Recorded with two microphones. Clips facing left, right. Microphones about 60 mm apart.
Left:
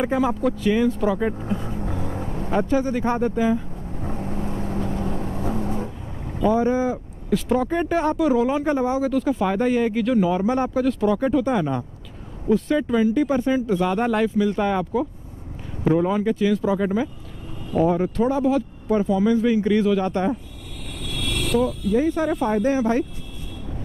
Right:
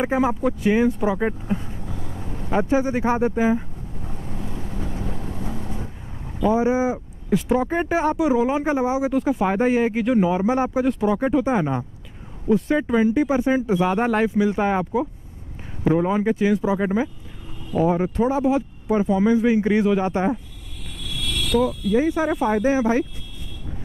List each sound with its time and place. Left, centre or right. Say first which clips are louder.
0.0 s speech: even; centre
1.6 s vehicle: left 6 dB; left
2.5 s speech: right 1 dB; centre
4.0 s vehicle: left 6 dB; left
6.4 s speech: even; centre
9.1 s speech: right 1 dB; centre
17.7 s speech: even; centre
19.0 s speech: right 2 dB; right
21.0 s vehicle: left 1 dB; left
22.1 s speech: right 1 dB; centre